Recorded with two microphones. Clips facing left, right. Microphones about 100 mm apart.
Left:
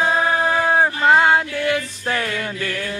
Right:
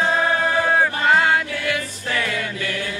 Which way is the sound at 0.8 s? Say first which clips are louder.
Left 5 dB; 25° left (ahead or behind).